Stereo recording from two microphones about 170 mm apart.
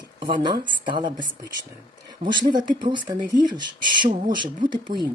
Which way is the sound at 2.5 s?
25° right (ahead or behind).